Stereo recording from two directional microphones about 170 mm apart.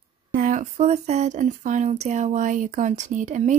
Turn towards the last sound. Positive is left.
turn(degrees=-45)  # may be behind; listen again after turning